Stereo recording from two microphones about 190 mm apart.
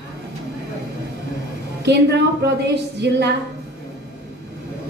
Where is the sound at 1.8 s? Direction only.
65° right (ahead or behind).